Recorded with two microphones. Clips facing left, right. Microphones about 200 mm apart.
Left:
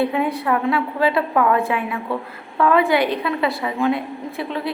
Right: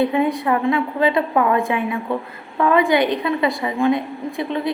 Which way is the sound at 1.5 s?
Centre (ahead or behind).